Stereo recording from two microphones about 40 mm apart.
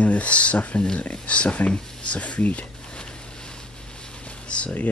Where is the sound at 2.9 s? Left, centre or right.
Left.